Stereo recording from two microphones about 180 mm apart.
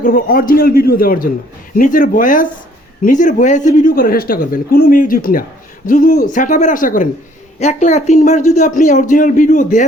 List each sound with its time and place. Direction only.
0.0 s speech: 50° left (ahead or behind)